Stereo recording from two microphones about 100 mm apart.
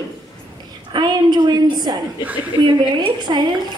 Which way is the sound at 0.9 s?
45° right (ahead or behind).